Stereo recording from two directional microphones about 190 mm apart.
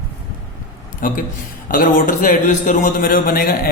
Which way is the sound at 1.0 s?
45° left (ahead or behind).